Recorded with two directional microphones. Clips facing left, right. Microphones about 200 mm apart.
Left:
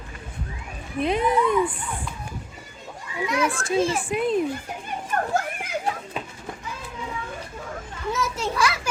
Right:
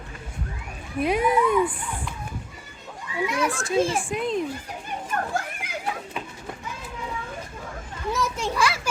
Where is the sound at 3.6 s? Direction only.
5° left (ahead or behind).